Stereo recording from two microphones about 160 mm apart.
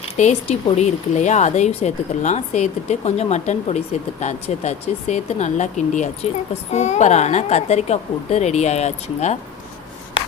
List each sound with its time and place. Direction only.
0.2 s speech: 45° left (ahead or behind)